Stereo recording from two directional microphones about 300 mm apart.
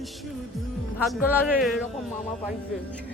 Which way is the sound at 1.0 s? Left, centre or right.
Centre.